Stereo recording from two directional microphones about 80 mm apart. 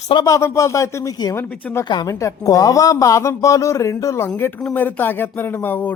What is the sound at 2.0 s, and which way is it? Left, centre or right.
Speech, left.